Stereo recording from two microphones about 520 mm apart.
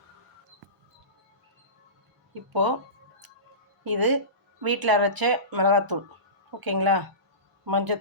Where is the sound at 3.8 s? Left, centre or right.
Right.